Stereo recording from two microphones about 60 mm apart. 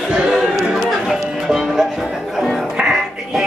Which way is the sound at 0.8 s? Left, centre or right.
Centre.